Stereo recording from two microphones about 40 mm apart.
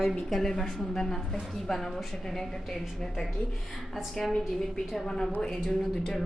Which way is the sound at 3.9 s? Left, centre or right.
Centre.